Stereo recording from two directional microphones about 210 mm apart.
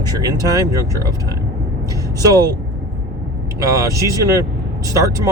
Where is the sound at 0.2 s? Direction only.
15° right (ahead or behind).